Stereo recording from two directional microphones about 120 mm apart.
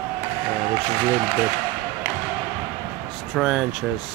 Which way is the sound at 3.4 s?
Centre (ahead or behind).